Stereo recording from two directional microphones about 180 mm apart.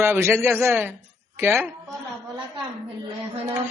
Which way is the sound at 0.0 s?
15° right (ahead or behind).